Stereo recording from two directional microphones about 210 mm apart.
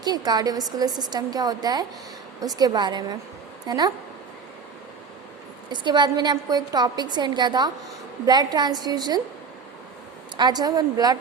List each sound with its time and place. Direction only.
0.0 s a woman's voice: 20° right (ahead or behind)
5.7 s a woman's voice: 20° right (ahead or behind)
10.3 s a woman's voice: 20° right (ahead or behind)